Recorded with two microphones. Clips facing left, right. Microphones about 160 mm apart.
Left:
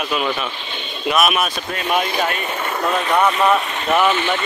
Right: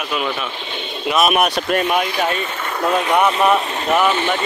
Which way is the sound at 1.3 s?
65° right (ahead or behind).